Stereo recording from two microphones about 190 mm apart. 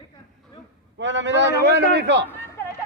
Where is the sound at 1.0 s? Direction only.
75° right (ahead or behind).